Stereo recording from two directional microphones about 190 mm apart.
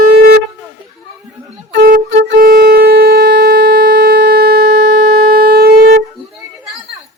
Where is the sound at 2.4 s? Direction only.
50° right (ahead or behind).